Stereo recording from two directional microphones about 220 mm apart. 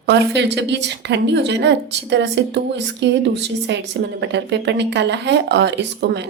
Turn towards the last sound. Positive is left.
turn(degrees=-50)  # may be behind; listen again after turning